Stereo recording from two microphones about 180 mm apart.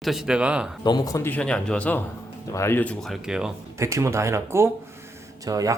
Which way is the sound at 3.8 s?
15° right (ahead or behind).